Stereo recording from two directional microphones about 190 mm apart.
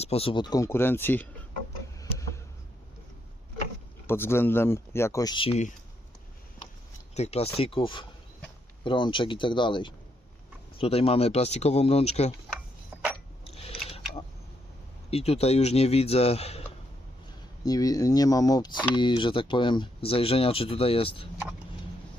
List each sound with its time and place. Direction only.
0.0 s speech: 30° left (ahead or behind); by 1.3 s 10° left (ahead or behind)
2.0 s tick-tock: 15° left (ahead or behind)
4.0 s speech: 10° left (ahead or behind); by 5.7 s 35° left (ahead or behind)
7.1 s speech: 35° left (ahead or behind)
12.9 s a sound: 10° right (ahead or behind)
13.4 s a sound: 30° left (ahead or behind)
15.1 s speech: 30° left (ahead or behind)
17.7 s speech: 20° left (ahead or behind)